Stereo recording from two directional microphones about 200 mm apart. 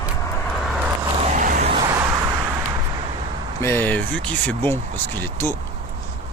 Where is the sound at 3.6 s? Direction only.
10° left (ahead or behind).